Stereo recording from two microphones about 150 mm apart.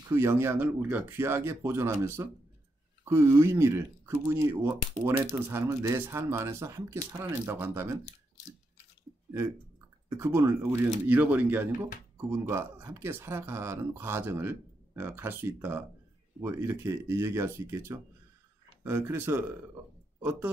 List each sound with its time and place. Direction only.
0.1 s speech: 15° right (ahead or behind)
10.1 s speech: 15° right (ahead or behind)